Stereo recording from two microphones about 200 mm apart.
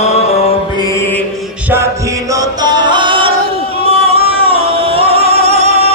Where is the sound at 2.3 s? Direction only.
20° right (ahead or behind).